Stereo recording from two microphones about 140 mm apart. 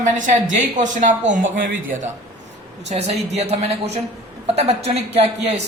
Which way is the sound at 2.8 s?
50° right (ahead or behind).